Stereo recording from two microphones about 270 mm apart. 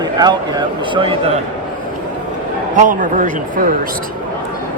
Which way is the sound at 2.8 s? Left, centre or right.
Right.